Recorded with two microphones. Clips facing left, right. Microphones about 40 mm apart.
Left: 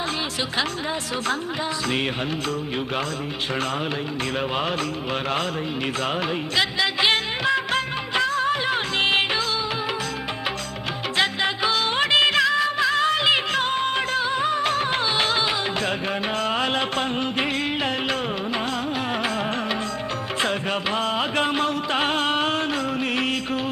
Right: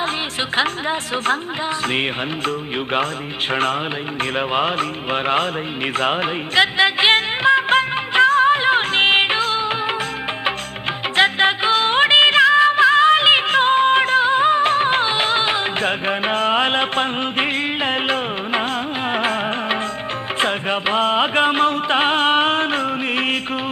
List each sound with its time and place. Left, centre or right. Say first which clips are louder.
0.5 s a woman's voice: right 8 dB; right
4.2 s music: right 7 dB; right
11.2 s music: right 7 dB; right